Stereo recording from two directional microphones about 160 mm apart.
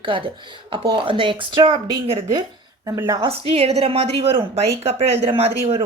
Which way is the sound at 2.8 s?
20° right (ahead or behind).